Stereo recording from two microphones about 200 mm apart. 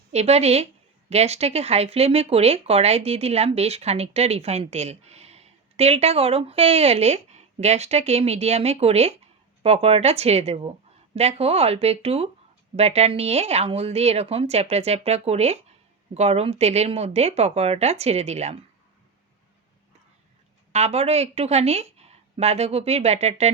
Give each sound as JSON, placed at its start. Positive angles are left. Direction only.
{"t": 0.1, "sound": "speech", "side_deg": -35}
{"t": 20.7, "sound": "speech", "side_deg": -30}